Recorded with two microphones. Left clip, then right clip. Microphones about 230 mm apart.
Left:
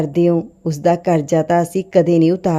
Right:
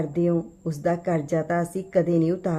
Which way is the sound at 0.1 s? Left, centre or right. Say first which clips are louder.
Left 9 dB; left.